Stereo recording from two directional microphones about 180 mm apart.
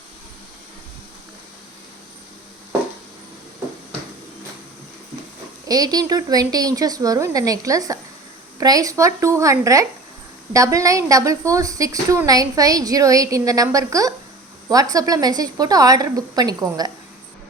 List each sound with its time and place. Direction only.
5.6 s a woman's voice: 20° right (ahead or behind)